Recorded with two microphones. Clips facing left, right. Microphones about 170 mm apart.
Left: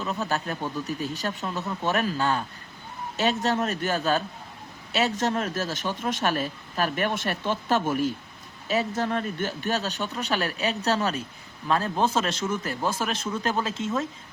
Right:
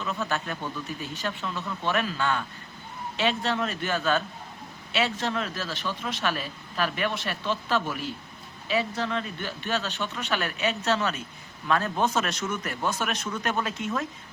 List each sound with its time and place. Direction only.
0.0 s a man's voice: 35° left (ahead or behind)